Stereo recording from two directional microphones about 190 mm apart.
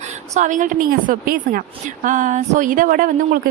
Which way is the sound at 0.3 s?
40° right (ahead or behind).